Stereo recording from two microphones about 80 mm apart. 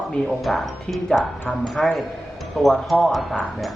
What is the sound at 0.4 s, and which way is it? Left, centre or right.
A man's voice, centre.